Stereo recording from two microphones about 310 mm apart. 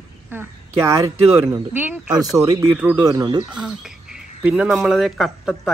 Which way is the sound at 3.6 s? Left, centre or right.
Centre.